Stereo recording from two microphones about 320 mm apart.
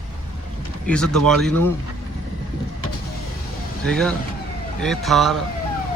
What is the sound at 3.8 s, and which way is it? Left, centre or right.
Speech, centre.